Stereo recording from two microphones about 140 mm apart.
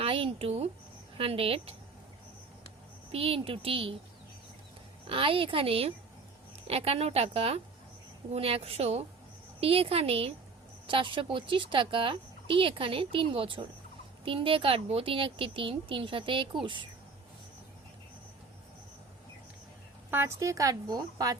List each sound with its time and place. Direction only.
0.0 s a woman's voice: 40° right (ahead or behind)
3.1 s speech: 45° right (ahead or behind)
5.0 s a woman's voice: 40° right (ahead or behind)
20.1 s a woman's voice: 15° right (ahead or behind)